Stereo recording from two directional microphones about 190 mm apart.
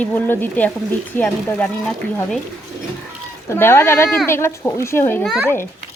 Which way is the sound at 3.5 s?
15° left (ahead or behind).